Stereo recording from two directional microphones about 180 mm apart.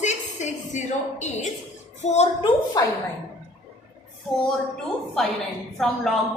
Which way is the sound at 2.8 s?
20° left (ahead or behind).